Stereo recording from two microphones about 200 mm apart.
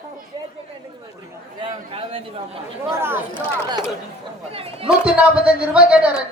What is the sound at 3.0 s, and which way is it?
Speech, 10° right (ahead or behind).